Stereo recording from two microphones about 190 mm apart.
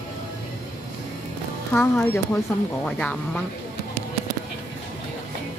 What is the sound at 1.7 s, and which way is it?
Speech, 10° left (ahead or behind).